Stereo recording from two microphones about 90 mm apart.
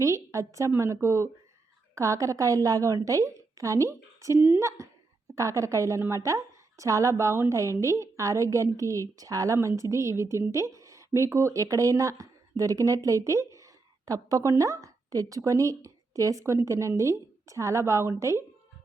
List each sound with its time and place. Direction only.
0.0 s a woman's voice: 35° right (ahead or behind)
4.4 s speech: 20° right (ahead or behind)
5.3 s a woman's voice: 35° right (ahead or behind)